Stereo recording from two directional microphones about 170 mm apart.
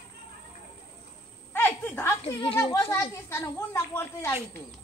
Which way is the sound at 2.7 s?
15° left (ahead or behind).